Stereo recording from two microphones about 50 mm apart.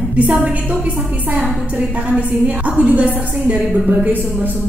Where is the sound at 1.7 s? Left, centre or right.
Right.